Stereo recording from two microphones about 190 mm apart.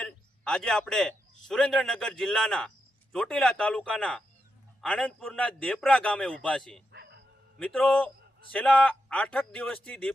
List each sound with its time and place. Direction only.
0.0 s a man's voice: 5° left (ahead or behind)
6.9 s music: 65° right (ahead or behind)
7.6 s a man's voice: 5° left (ahead or behind)